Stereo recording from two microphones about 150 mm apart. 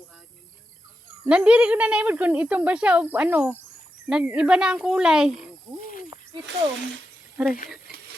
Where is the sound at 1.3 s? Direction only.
10° right (ahead or behind).